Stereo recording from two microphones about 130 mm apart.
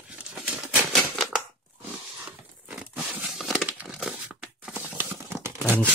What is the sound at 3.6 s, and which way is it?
Crumpling, 10° right (ahead or behind).